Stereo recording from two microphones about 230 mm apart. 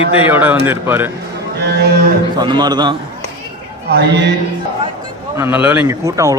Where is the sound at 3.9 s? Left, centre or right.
Right.